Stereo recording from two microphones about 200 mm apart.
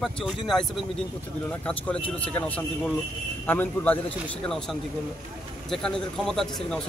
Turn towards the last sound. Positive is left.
turn(degrees=0)  # may be behind; listen again after turning